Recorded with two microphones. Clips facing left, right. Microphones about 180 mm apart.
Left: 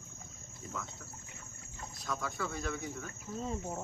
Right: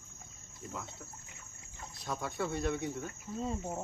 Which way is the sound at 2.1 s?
25° right (ahead or behind).